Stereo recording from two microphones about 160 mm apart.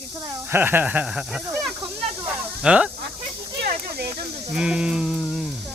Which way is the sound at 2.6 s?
5° right (ahead or behind).